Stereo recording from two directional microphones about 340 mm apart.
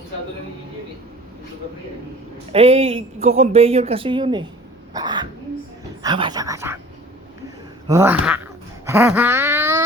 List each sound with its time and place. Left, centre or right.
2.5 s speech: centre
4.9 s throat clearing: centre
6.0 s speech: centre
7.9 s speech: centre
8.9 s wail: centre